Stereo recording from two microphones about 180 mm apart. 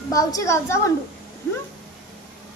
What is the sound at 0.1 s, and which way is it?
Speech, 20° left (ahead or behind).